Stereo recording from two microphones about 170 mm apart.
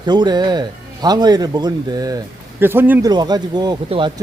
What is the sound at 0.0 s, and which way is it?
Speech, 25° right (ahead or behind).